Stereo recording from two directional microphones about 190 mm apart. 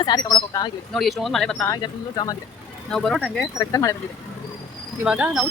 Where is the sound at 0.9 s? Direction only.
Centre (ahead or behind).